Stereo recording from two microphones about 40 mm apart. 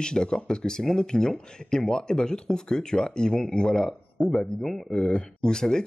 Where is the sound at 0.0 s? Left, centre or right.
Centre.